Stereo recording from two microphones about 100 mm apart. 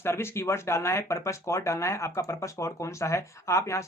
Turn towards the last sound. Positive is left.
turn(degrees=30)  # may be behind; listen again after turning